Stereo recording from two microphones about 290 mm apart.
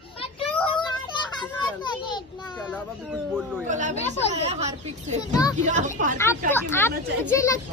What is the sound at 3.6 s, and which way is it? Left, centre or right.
Chatter, right.